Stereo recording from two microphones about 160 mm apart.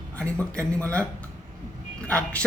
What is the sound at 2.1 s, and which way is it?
Speech, 5° left (ahead or behind).